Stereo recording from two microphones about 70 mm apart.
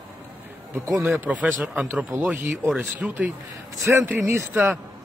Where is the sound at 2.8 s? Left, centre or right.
Right.